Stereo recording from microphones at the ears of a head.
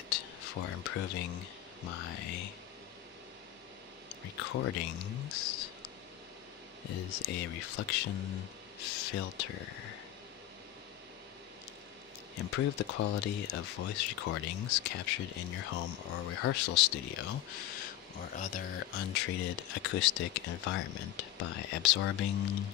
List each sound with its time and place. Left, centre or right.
0.1 s speech: left
4.1 s speech: left
6.8 s speech: left
12.4 s speech: left